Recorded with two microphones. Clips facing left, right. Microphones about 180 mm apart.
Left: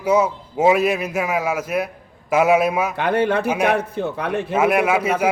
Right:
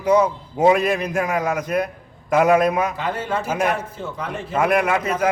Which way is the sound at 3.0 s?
65° left (ahead or behind).